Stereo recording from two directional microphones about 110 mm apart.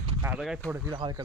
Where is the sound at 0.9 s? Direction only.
45° right (ahead or behind).